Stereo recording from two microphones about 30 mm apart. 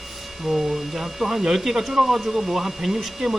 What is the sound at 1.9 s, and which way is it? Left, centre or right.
Speech, centre.